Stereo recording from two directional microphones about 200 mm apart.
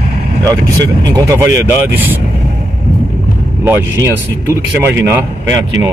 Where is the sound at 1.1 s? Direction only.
15° right (ahead or behind).